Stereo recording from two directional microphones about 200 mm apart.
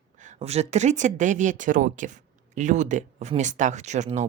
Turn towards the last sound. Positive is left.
turn(degrees=-35)  # may be behind; listen again after turning